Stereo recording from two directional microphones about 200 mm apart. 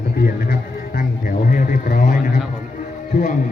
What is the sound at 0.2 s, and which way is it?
Music, 50° left (ahead or behind).